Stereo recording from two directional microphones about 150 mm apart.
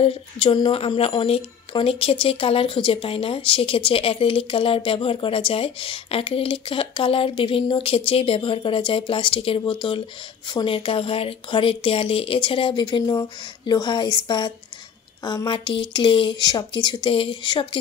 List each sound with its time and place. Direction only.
0.0 s a woman's voice: 35° left (ahead or behind)